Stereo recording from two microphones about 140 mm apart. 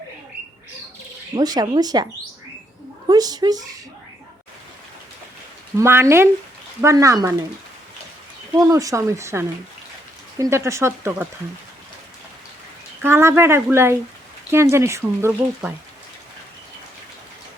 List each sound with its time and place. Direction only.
1.4 s speech: 30° right (ahead or behind)
3.1 s speech: 30° right (ahead or behind)
5.7 s speech: 20° right (ahead or behind)
8.5 s speech: 25° right (ahead or behind)
13.0 s speech: 15° right (ahead or behind)